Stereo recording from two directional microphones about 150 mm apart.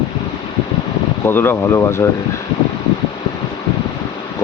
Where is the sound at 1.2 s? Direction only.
15° left (ahead or behind).